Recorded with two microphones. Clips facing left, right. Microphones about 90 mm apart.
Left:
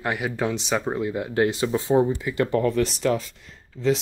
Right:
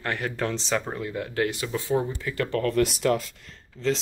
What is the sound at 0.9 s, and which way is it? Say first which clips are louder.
Speech: left 5 dB; 20° left (ahead or behind).